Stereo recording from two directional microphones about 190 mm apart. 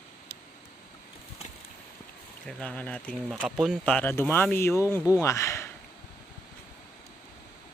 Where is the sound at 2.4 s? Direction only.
5° left (ahead or behind).